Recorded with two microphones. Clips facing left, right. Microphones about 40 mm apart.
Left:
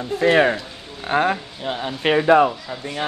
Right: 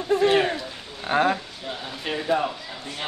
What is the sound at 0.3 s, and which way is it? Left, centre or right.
Speech, left.